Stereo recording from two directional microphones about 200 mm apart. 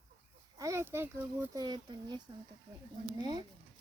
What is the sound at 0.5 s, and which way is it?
Speech, 15° right (ahead or behind).